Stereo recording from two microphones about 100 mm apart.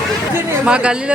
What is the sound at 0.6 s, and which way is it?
Speech, 10° right (ahead or behind).